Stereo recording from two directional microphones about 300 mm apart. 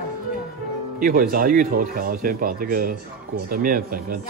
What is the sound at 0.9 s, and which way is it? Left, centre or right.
Speech, right.